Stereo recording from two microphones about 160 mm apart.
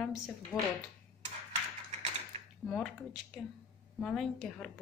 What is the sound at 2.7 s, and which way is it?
A woman's voice, 5° left (ahead or behind).